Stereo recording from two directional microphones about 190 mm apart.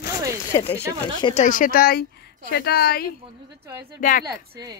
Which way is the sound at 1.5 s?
45° left (ahead or behind).